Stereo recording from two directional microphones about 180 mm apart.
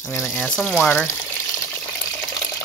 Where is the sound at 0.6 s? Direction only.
10° left (ahead or behind).